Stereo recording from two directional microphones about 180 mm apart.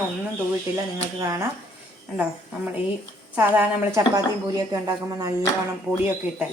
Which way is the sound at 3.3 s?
10° right (ahead or behind).